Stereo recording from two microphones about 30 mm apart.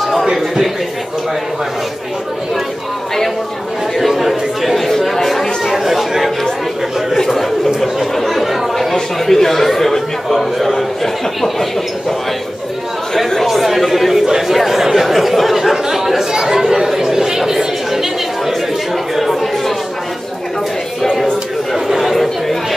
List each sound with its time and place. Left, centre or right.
0.2 s speech: centre
4.2 s chatter: centre
5.7 s chatter: centre
7.2 s chatter: centre
8.9 s speech: centre
13.5 s speech: centre
14.1 s speech: centre
17.5 s chatter: centre
21.7 s chatter: centre
22.0 s chatter: centre